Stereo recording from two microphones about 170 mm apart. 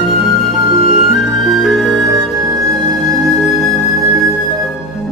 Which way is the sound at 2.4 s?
20° right (ahead or behind).